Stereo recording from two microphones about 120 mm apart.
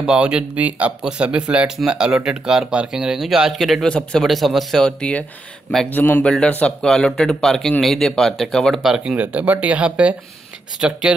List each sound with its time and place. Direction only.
0.0 s speech: 5° right (ahead or behind)